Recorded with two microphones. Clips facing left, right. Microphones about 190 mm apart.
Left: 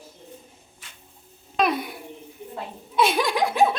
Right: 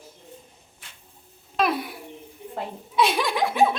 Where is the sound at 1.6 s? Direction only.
Centre (ahead or behind).